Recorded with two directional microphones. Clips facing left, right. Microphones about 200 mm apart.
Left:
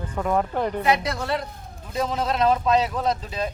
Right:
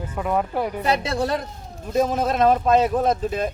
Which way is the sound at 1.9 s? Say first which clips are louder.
Right 4 dB; 50° right (ahead or behind).